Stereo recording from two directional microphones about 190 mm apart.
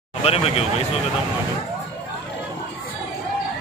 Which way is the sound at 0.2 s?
30° left (ahead or behind).